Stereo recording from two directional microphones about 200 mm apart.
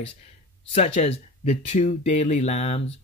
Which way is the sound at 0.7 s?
30° left (ahead or behind).